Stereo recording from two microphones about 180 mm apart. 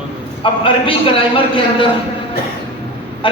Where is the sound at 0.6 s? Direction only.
30° left (ahead or behind).